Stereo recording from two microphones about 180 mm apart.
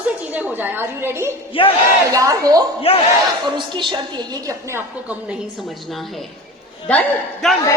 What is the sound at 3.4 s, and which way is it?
A woman's voice, 25° right (ahead or behind).